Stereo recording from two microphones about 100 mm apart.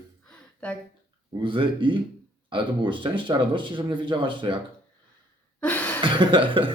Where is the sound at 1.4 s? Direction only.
60° right (ahead or behind).